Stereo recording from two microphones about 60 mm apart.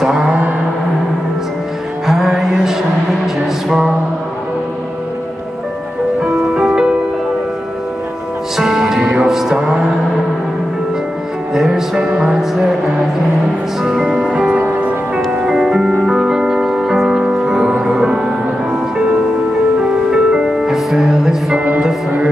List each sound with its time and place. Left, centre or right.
0.0 s a sound: centre
2.0 s music: centre
3.6 s mantra: centre
6.2 s music: centre
8.5 s music: centre
11.5 s music: centre
13.8 s music: centre
14.6 s music: right
15.3 s music: centre
19.8 s music: centre